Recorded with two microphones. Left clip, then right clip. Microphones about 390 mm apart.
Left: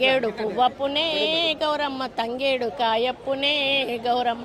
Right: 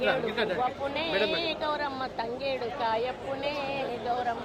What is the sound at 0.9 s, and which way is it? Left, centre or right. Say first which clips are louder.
A woman's voice: left 5 dB; left.